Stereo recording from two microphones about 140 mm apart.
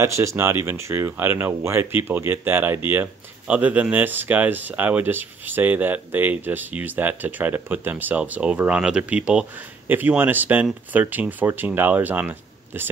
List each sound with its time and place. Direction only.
0.0 s speech: 20° right (ahead or behind)